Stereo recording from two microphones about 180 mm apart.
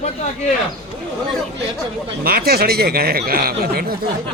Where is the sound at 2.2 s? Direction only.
55° right (ahead or behind).